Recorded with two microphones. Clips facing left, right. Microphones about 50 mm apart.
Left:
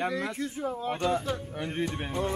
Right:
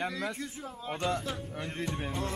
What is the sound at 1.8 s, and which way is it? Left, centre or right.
Speech, left.